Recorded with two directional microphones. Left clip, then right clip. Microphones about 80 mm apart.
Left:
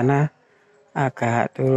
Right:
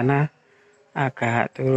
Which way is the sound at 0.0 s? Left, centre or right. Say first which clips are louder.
Left 1 dB; left.